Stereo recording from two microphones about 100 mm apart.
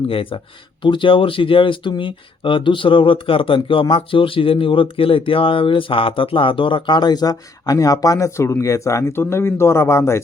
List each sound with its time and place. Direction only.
0.1 s speech: 65° left (ahead or behind)
0.8 s speech: 55° left (ahead or behind); by 10.2 s 30° left (ahead or behind)